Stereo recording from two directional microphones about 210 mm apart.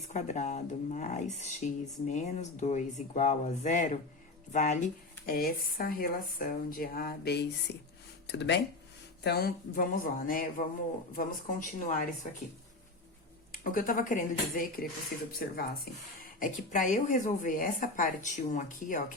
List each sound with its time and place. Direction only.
0.1 s speech: 35° left (ahead or behind)
13.5 s speech: 40° left (ahead or behind)